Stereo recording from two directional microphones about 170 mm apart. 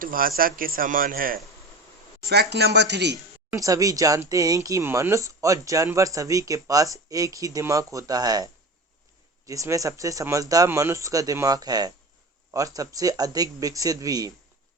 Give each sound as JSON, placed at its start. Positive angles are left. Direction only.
{"t": 0.0, "sound": "speech", "side_deg": -55}
{"t": 2.2, "sound": "speech", "side_deg": -75}
{"t": 3.5, "sound": "speech", "side_deg": -20}
{"t": 9.5, "sound": "speech", "side_deg": -20}